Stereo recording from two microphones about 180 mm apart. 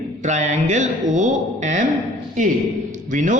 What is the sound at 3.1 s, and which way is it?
Speech, 45° right (ahead or behind).